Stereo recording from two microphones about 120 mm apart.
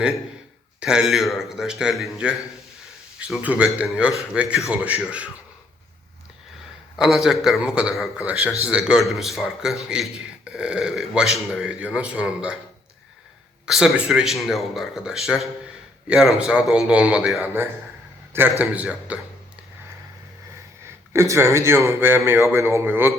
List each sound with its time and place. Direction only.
0.8 s a man's voice: 5° right (ahead or behind)
6.9 s a man's voice: 5° right (ahead or behind)
13.7 s a man's voice: 5° right (ahead or behind)
17.4 s a man's voice: 20° right (ahead or behind)
21.1 s a man's voice: 25° right (ahead or behind)